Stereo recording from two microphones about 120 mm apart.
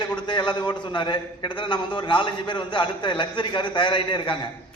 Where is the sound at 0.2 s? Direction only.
40° left (ahead or behind).